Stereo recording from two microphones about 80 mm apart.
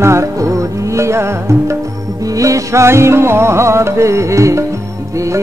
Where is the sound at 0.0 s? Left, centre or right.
Right.